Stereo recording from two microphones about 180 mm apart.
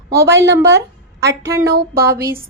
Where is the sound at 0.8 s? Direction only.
70° right (ahead or behind).